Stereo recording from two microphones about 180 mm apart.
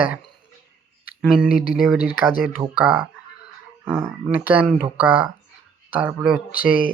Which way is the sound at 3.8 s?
10° right (ahead or behind).